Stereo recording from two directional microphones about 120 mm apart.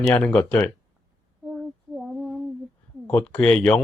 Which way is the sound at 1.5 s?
5° right (ahead or behind).